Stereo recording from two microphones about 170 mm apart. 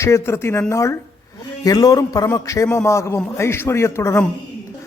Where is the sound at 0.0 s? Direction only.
15° left (ahead or behind).